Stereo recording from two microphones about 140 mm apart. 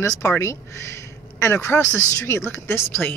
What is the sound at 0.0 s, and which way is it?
Speech, 20° left (ahead or behind).